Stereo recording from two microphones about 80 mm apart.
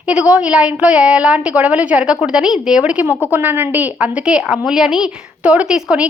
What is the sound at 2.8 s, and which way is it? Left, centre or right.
A woman's voice, centre.